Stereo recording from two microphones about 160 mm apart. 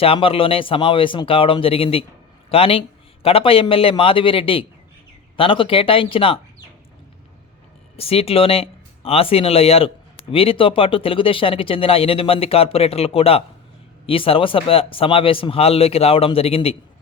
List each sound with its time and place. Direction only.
0.0 s speech: 35° left (ahead or behind)
7.9 s speech: 40° left (ahead or behind)